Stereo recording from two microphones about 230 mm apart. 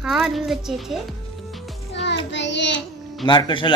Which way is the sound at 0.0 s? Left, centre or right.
Centre.